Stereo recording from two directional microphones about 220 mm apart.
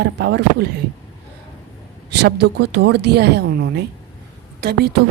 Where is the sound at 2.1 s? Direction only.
50° right (ahead or behind).